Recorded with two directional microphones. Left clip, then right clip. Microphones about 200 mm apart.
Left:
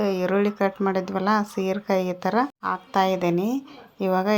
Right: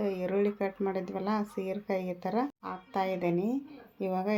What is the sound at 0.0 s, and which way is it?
Speech, 15° left (ahead or behind).